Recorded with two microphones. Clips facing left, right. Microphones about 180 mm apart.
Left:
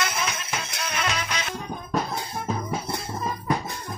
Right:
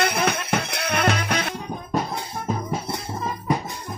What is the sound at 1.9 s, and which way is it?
Music, 10° right (ahead or behind).